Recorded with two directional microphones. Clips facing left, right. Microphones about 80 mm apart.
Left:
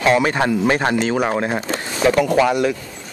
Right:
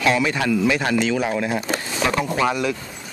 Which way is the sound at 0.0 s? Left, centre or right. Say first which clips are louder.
Left 4 dB; left.